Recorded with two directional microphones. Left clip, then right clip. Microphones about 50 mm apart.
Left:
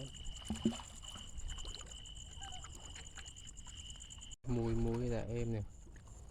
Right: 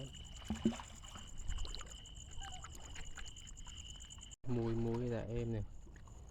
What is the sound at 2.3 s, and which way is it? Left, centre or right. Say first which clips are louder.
Whale vocalization: right 1 dB; right.